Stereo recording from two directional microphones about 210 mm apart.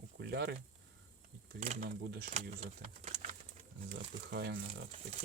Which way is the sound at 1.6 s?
30° right (ahead or behind).